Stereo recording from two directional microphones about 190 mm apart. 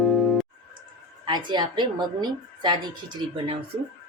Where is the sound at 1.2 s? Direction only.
25° right (ahead or behind).